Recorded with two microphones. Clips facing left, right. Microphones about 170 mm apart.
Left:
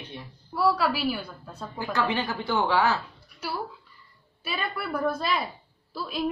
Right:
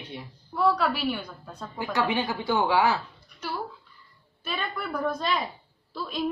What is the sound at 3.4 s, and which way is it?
A woman's voice, 10° left (ahead or behind).